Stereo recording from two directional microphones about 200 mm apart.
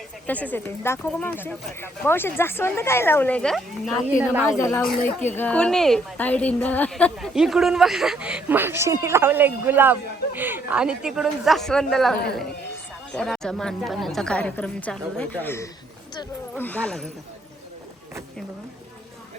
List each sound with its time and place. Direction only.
0.3 s speech: 10° left (ahead or behind)
4.5 s a woman's voice: 15° left (ahead or behind)
13.1 s a woman's voice: 5° left (ahead or behind)